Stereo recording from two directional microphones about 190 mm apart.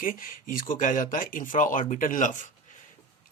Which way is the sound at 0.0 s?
45° left (ahead or behind).